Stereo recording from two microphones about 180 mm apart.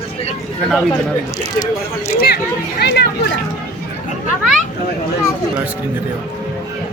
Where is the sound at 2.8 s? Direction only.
65° left (ahead or behind).